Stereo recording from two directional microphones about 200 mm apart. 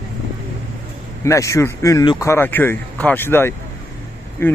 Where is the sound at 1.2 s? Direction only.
15° left (ahead or behind).